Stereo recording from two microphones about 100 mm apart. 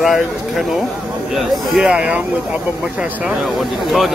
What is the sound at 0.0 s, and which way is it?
Speech, centre (ahead or behind).